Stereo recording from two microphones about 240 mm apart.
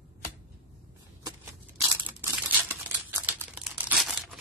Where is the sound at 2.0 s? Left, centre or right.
Centre.